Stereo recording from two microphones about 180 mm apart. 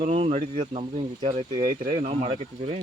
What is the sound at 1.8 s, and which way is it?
Speech, 35° right (ahead or behind).